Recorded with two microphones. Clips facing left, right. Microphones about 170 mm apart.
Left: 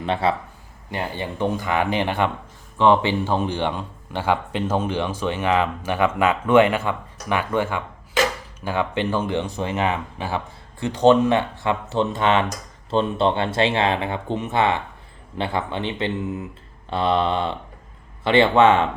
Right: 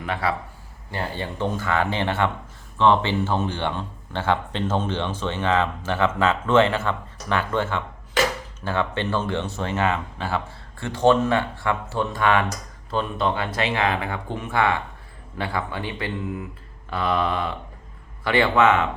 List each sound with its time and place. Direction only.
0.0 s speech: 25° left (ahead or behind)